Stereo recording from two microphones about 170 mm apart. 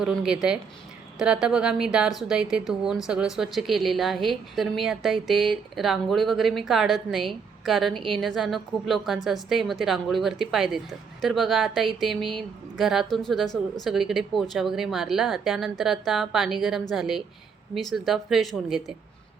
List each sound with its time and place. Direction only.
0.0 s a woman's voice: centre (ahead or behind)